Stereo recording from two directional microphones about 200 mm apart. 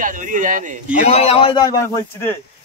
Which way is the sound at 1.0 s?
30° left (ahead or behind).